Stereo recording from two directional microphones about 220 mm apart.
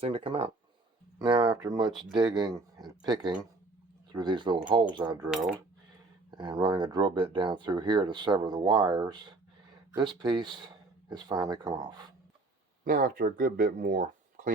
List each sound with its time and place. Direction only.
0.0 s speech: 25° right (ahead or behind)
6.3 s speech: 20° right (ahead or behind)
10.2 s speech: 20° right (ahead or behind)
12.8 s speech: 40° right (ahead or behind)